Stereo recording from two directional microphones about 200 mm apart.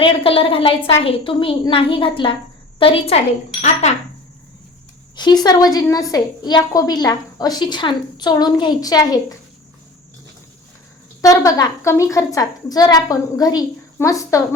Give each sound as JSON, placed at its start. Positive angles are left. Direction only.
{"t": 0.0, "sound": "a woman's voice", "side_deg": 25}
{"t": 5.1, "sound": "a woman's voice", "side_deg": 20}
{"t": 11.2, "sound": "a woman's voice", "side_deg": 15}